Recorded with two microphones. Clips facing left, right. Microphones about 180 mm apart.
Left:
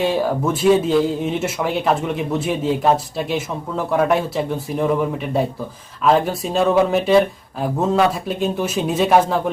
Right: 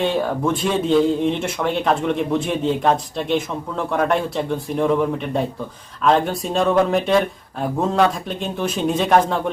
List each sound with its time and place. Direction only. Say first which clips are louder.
0.0 s speech: left 1 dB; 5° left (ahead or behind)